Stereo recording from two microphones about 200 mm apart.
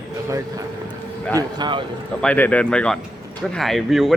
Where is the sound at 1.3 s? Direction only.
20° right (ahead or behind).